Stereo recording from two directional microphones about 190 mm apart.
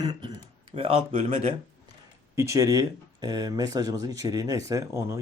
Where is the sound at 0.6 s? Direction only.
30° right (ahead or behind).